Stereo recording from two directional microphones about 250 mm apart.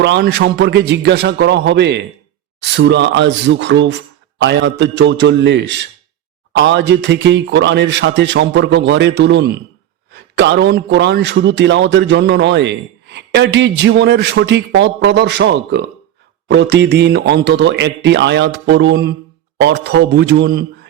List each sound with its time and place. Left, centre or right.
0.0 s a man's voice: right